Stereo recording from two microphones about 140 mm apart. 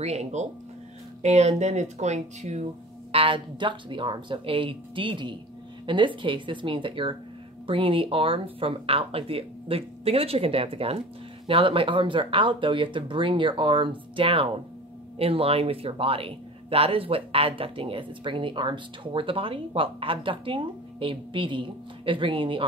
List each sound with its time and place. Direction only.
0.0 s speech: 50° right (ahead or behind)
3.1 s speech: 40° right (ahead or behind)